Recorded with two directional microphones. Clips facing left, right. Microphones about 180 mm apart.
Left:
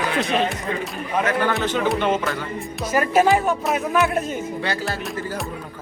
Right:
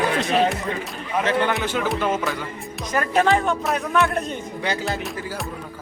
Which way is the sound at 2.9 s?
10° left (ahead or behind).